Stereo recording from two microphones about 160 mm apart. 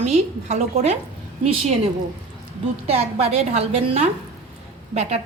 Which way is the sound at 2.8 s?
40° right (ahead or behind).